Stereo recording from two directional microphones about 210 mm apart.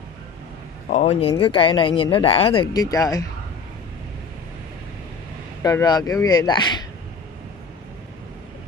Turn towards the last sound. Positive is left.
turn(degrees=20)  # may be behind; listen again after turning